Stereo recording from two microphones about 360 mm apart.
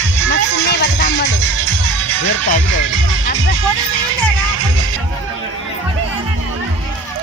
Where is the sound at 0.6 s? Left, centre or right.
Left.